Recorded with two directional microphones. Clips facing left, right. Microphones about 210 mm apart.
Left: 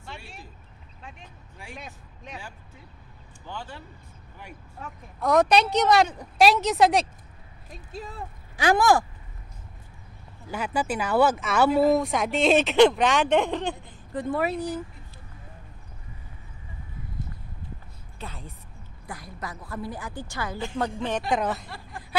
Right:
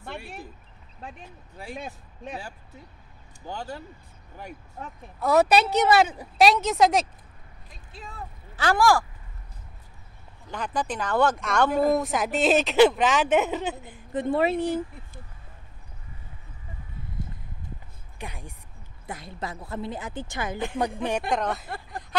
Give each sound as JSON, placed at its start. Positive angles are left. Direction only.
{"t": 0.0, "sound": "a sound", "side_deg": -55}
{"t": 1.6, "sound": "speech", "side_deg": -35}
{"t": 3.4, "sound": "speech", "side_deg": -40}
{"t": 5.2, "sound": "speech", "side_deg": -5}
{"t": 8.5, "sound": "speech", "side_deg": 20}
{"t": 10.5, "sound": "speech", "side_deg": 10}
{"t": 14.1, "sound": "a woman's voice", "side_deg": -25}
{"t": 18.2, "sound": "a woman's voice", "side_deg": -15}
{"t": 21.3, "sound": "speech", "side_deg": 0}
{"t": 21.6, "sound": "speech", "side_deg": -50}